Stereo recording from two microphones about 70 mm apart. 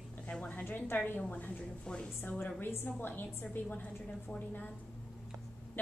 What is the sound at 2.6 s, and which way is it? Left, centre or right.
A woman's voice, left.